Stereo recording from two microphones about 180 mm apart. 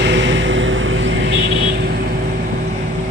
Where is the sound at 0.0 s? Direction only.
90° right.